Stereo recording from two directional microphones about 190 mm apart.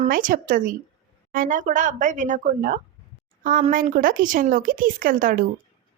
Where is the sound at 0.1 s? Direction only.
45° right (ahead or behind).